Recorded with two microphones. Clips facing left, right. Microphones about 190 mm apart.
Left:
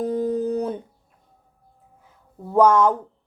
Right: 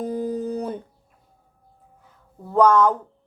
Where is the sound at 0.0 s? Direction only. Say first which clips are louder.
Left 3 dB; centre (ahead or behind).